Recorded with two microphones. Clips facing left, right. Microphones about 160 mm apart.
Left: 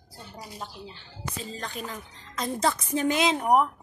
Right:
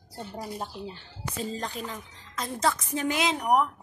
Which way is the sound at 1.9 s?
Centre (ahead or behind).